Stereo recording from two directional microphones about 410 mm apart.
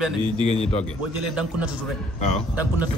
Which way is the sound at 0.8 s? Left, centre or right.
Centre.